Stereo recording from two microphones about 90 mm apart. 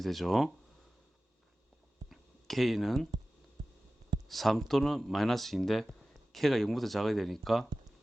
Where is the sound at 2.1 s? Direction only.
Centre (ahead or behind).